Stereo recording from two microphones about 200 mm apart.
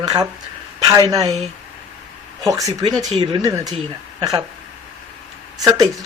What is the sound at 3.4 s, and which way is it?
Speech, 15° right (ahead or behind).